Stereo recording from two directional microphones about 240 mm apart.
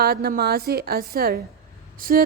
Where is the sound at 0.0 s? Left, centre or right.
Right.